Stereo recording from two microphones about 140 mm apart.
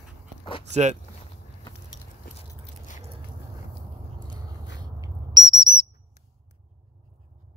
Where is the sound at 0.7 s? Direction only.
55° right (ahead or behind).